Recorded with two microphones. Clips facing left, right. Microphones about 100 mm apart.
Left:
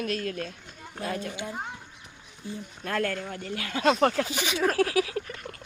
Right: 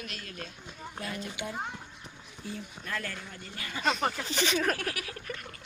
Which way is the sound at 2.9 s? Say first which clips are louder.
Left 10 dB; 60° left (ahead or behind).